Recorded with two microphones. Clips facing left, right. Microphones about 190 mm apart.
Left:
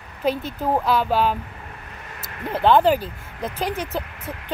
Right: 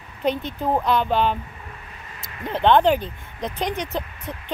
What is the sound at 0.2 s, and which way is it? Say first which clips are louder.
Speech: even; 5° left (ahead or behind).